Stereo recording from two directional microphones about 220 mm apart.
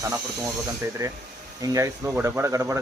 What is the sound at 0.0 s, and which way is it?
A man's voice, 15° right (ahead or behind).